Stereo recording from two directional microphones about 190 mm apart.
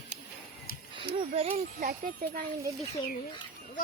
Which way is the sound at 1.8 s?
45° right (ahead or behind).